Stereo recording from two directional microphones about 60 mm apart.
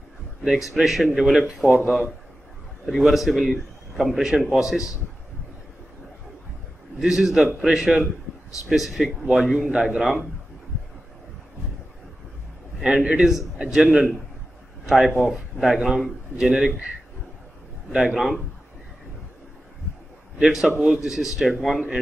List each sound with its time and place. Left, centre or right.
0.4 s a man's voice: centre
3.0 s a man's voice: centre
7.0 s speech: centre
12.8 s speech: centre
13.2 s a man's voice: centre
13.6 s a man's voice: centre
14.9 s a man's voice: centre
17.9 s speech: centre
20.3 s a man's voice: centre